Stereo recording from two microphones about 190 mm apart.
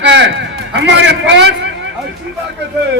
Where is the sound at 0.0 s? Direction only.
70° right (ahead or behind).